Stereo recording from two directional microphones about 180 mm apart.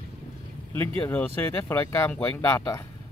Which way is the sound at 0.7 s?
10° left (ahead or behind).